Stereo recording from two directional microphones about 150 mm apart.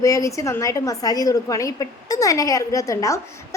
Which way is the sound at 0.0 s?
20° left (ahead or behind).